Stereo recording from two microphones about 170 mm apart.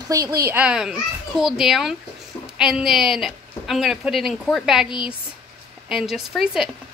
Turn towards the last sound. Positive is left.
turn(degrees=0)  # may be behind; listen again after turning